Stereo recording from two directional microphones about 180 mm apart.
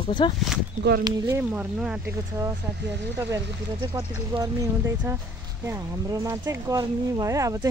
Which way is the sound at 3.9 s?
20° right (ahead or behind).